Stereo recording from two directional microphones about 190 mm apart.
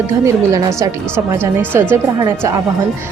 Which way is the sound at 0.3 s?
15° right (ahead or behind).